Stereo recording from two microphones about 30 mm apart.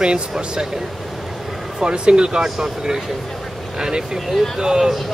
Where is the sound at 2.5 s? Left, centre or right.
Right.